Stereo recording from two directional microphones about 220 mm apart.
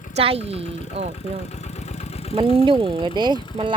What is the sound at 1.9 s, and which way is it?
Vehicle, 30° left (ahead or behind).